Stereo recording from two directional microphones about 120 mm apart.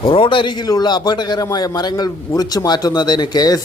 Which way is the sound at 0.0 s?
45° left (ahead or behind).